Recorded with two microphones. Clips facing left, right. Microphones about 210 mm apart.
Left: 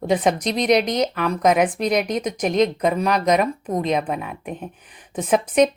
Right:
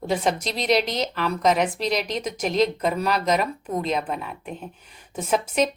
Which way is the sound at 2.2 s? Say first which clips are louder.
Left 3 dB; centre (ahead or behind).